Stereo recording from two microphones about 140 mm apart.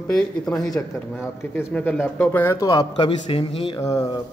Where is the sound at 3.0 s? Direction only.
40° left (ahead or behind).